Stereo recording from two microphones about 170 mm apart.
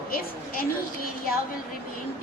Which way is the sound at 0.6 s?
60° left (ahead or behind).